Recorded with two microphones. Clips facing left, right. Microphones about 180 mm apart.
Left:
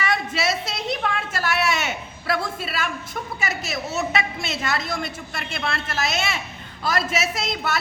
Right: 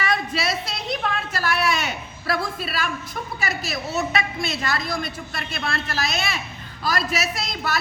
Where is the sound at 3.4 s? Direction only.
20° left (ahead or behind).